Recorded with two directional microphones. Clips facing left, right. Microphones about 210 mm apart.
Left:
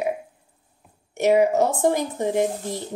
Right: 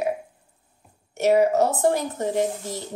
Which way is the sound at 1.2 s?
15° left (ahead or behind).